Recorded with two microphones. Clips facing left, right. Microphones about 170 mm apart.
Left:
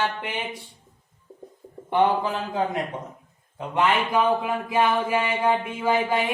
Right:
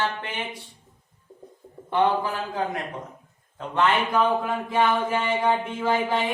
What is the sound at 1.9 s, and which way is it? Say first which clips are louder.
A man's voice: left 1 dB; 20° left (ahead or behind).